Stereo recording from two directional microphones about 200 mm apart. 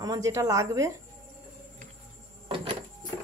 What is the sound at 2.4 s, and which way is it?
Printer, 25° right (ahead or behind).